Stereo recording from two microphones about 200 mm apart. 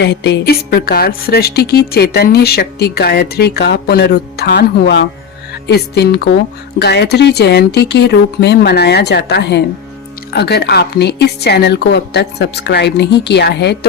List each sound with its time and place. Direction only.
0.0 s a woman's voice: 60° left (ahead or behind)